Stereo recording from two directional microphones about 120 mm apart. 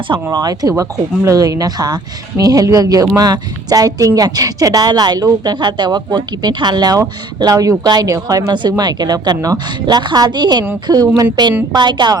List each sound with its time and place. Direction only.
0.3 s a woman's voice: 30° right (ahead or behind)